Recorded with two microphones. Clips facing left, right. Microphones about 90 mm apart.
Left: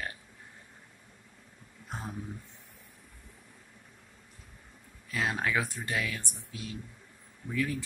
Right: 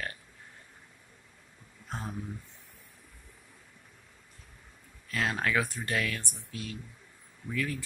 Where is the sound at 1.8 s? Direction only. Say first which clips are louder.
Right 1 dB; 10° left (ahead or behind).